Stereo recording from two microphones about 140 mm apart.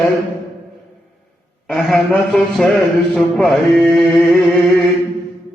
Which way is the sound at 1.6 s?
Centre (ahead or behind).